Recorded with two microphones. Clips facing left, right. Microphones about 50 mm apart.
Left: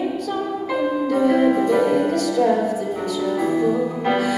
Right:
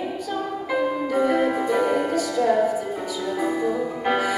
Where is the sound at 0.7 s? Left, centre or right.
Centre.